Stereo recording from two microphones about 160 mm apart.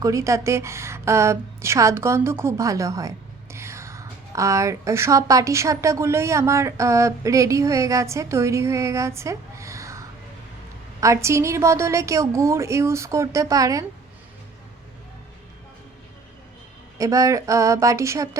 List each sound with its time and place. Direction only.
0.0 s a woman's voice: 20° right (ahead or behind)
11.0 s a woman's voice: 20° right (ahead or behind)
17.0 s a woman's voice: 20° right (ahead or behind)